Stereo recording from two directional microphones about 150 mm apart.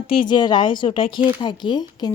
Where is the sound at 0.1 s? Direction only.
30° left (ahead or behind).